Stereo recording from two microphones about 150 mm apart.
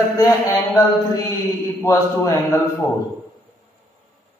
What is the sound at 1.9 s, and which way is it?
Speech, 20° left (ahead or behind).